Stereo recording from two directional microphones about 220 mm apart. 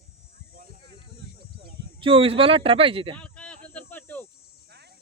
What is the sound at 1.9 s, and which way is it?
Speech, 25° right (ahead or behind).